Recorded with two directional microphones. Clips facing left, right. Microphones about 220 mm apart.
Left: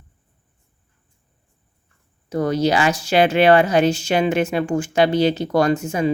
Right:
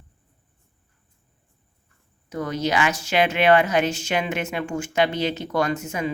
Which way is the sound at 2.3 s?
35° left (ahead or behind).